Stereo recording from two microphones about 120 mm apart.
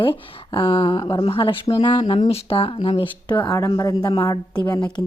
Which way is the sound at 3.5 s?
30° left (ahead or behind).